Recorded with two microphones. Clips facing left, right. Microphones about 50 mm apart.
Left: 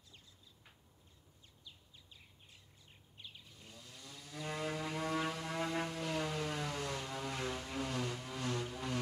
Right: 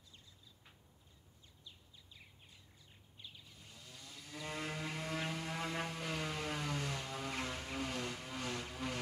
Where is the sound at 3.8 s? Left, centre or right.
Centre.